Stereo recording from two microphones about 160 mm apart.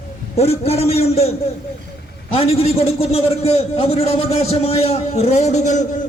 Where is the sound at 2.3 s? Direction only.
40° left (ahead or behind).